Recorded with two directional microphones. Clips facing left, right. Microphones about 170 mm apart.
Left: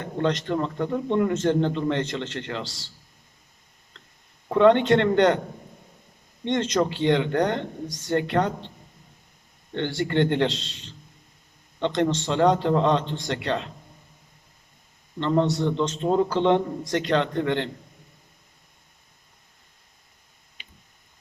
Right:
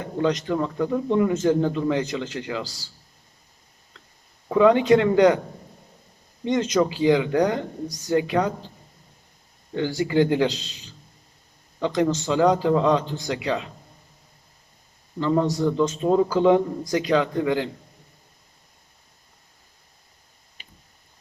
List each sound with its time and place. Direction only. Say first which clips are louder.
0.0 s speech: right 2 dB; 5° right (ahead or behind)
2.6 s a man's voice: even; 80° left
4.4 s speech: right 1 dB; 5° right (ahead or behind)
6.4 s speech: right 2 dB; 5° right (ahead or behind)
10.0 s speech: right 2 dB; 5° right (ahead or behind)
15.2 s speech: right 1 dB; 5° right (ahead or behind)